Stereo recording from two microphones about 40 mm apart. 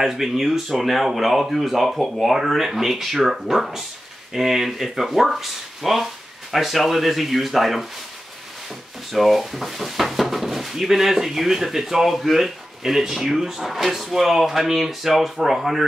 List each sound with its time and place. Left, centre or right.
0.0 s speech: centre
9.1 s speech: centre